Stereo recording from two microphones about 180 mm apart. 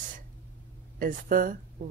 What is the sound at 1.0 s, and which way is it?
Speech, 50° right (ahead or behind).